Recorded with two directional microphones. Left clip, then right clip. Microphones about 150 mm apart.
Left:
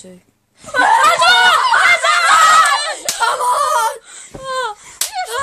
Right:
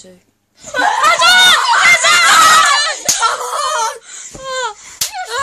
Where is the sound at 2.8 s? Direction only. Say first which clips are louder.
Right 3 dB; 20° left (ahead or behind).